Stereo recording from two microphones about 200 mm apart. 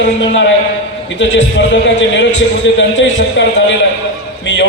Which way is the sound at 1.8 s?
65° left (ahead or behind).